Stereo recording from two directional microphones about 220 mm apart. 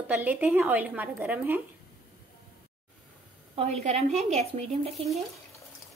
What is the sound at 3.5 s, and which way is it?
A woman's voice, 30° right (ahead or behind).